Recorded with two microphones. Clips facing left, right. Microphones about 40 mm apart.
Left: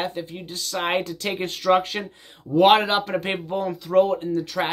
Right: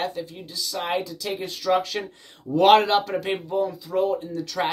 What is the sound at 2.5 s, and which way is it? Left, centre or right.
Speech, centre.